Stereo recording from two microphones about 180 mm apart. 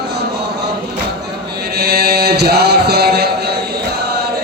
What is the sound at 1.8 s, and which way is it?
Chant, 60° right (ahead or behind).